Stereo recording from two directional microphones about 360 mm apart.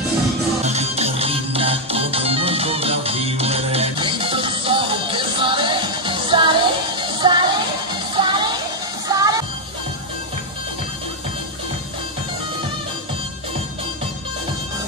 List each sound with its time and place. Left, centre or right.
0.7 s music: centre